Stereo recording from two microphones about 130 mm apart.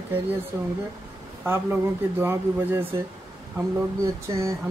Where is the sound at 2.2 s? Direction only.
20° right (ahead or behind).